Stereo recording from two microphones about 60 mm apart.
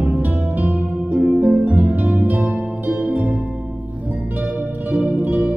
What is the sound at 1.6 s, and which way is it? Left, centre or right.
Harp, right.